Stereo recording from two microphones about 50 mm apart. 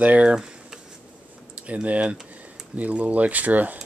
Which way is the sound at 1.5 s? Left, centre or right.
Right.